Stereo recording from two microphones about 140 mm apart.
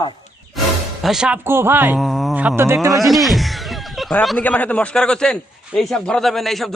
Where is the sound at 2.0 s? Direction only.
Centre (ahead or behind).